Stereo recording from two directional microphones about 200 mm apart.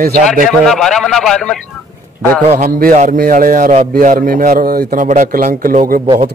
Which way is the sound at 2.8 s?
40° right (ahead or behind).